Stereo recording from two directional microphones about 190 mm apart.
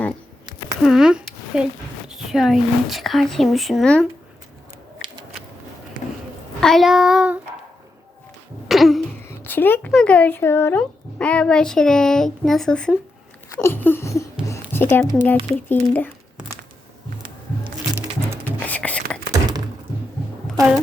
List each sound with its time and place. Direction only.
0.8 s speech: centre (ahead or behind)
6.6 s speech: centre (ahead or behind)
8.6 s throat clearing: centre (ahead or behind)
9.4 s speech: 10° left (ahead or behind)
13.5 s a sound: 15° left (ahead or behind)
14.7 s speech: 10° left (ahead or behind)
17.9 s music: 10° right (ahead or behind)
18.6 s whispering: 10° left (ahead or behind)
19.3 s thunk: 20° right (ahead or behind)